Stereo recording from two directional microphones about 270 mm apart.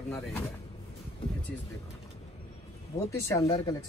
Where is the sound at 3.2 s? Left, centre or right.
Centre.